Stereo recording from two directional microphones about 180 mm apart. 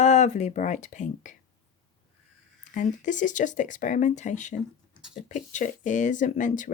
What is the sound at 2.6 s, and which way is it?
Speech, 45° left (ahead or behind).